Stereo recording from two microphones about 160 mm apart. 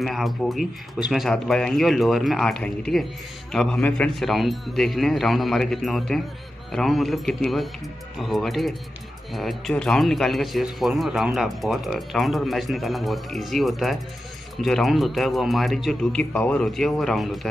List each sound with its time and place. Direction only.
0.0 s a man's voice: centre (ahead or behind)